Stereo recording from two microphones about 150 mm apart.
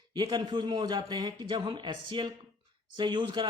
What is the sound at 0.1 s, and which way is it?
A man's voice, 30° right (ahead or behind).